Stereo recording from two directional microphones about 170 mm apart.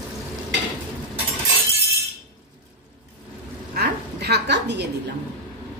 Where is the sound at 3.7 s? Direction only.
75° right (ahead or behind).